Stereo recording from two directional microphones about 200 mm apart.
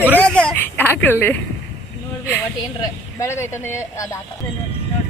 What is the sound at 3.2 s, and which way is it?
Speech, 15° left (ahead or behind).